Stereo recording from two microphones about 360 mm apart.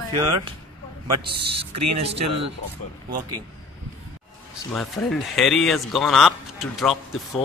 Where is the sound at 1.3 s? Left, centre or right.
Right.